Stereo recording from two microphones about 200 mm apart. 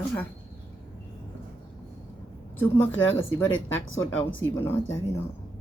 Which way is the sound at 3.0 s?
75° left (ahead or behind).